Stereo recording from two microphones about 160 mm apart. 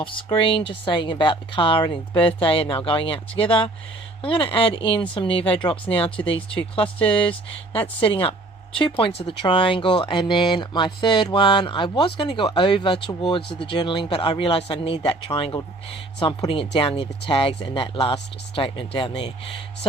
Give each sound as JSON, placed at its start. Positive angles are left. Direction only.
{"t": 0.0, "sound": "speech", "side_deg": 30}
{"t": 8.0, "sound": "speech", "side_deg": 35}